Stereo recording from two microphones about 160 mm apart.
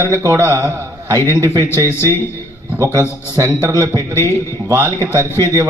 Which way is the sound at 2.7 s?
20° right (ahead or behind).